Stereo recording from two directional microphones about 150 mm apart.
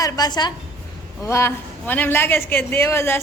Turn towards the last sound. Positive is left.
turn(degrees=15)  # may be behind; listen again after turning